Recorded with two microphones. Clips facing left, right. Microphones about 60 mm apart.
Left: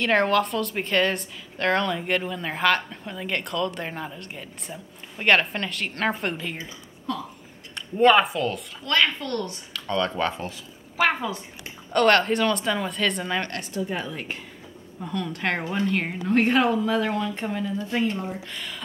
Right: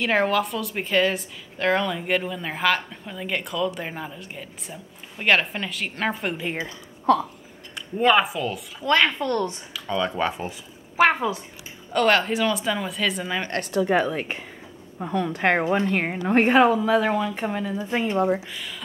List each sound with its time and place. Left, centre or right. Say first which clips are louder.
0.0 s a woman's voice: left 1 dB; centre
7.1 s speech: right 11 dB; right
7.7 s speech: left 2 dB; centre
8.8 s a woman's voice: right 3 dB; centre
9.8 s a woman's voice: even; centre
11.0 s a woman's voice: right 4 dB; right
11.9 s a woman's voice: left 1 dB; centre
13.6 s speech: right 8 dB; right
14.1 s a woman's voice: right 4 dB; right
16.4 s a woman's voice: right 4 dB; centre
18.5 s speech: even; centre